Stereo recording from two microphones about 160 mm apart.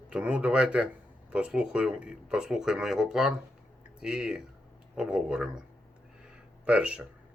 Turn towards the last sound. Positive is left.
turn(degrees=-10)  # may be behind; listen again after turning